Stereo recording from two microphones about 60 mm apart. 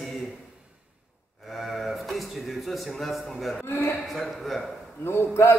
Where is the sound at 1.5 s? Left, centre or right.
Centre.